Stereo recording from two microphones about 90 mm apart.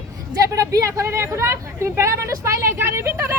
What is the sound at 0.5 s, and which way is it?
Speech, 40° right (ahead or behind).